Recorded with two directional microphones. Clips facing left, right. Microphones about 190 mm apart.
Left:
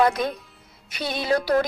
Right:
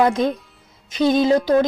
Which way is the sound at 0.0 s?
25° right (ahead or behind).